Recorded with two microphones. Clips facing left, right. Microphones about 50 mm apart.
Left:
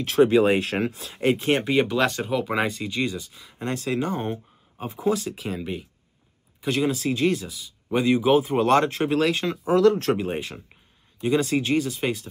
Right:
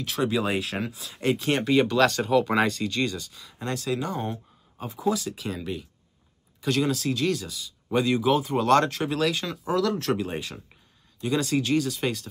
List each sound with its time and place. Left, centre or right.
0.2 s speech: left
0.6 s speech: left
1.1 s speech: centre